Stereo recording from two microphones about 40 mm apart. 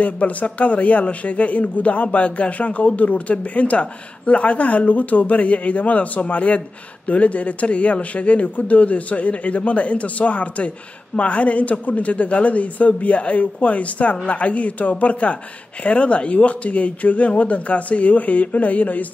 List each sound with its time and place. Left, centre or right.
0.0 s speech: left